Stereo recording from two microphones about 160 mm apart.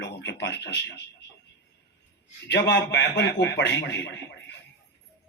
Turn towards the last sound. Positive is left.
turn(degrees=90)